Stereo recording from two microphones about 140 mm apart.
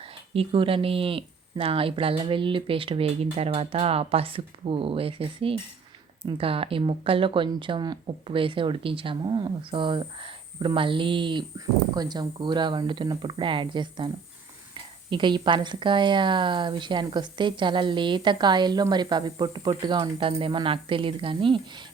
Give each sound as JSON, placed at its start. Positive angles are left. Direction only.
{"t": 0.0, "sound": "speech", "side_deg": -40}
{"t": 15.1, "sound": "speech", "side_deg": -35}